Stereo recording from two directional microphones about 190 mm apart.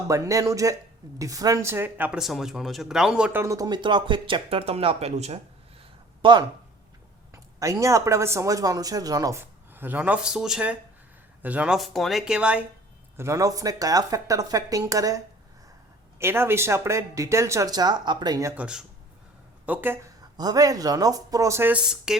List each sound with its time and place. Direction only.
0.1 s speech: 15° right (ahead or behind)
20.3 s speech: 20° right (ahead or behind); by 22.2 s 5° right (ahead or behind)